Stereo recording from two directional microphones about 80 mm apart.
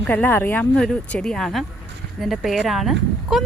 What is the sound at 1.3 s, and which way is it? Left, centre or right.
Speech, centre.